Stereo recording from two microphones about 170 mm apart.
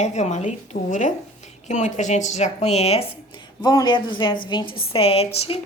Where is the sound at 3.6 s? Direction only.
25° left (ahead or behind).